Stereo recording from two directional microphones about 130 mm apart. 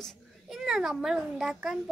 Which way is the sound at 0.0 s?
Centre (ahead or behind).